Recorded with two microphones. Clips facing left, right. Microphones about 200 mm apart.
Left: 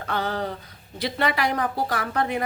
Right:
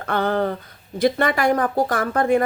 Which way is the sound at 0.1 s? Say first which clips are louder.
Right 7 dB; 55° right (ahead or behind).